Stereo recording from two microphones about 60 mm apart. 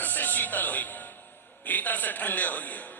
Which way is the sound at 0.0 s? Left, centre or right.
Left.